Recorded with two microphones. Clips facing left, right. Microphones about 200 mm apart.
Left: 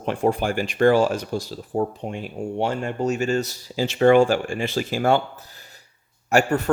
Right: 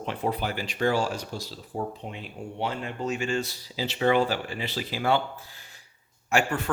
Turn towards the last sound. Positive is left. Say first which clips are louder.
# left 6 dB
turn(degrees=40)  # may be behind; listen again after turning